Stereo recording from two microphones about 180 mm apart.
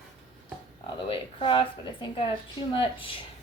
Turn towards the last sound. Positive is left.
turn(degrees=30)  # may be behind; listen again after turning